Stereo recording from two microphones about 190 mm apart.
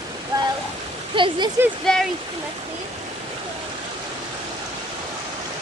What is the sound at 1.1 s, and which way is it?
Speech, 25° right (ahead or behind).